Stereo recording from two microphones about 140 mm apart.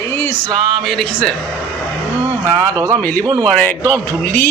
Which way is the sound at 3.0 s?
10° left (ahead or behind).